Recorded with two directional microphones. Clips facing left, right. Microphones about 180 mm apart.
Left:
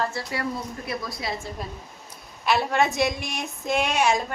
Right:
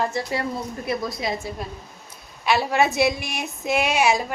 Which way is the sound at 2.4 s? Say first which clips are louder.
Right 2 dB; centre (ahead or behind).